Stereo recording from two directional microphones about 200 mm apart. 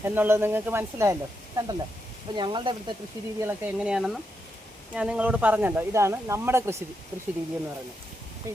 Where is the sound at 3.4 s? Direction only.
10° right (ahead or behind).